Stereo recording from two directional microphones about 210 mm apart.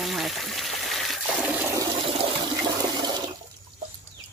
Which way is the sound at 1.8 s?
25° right (ahead or behind).